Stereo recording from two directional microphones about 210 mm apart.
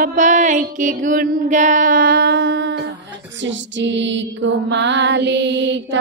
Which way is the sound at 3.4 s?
60° right (ahead or behind).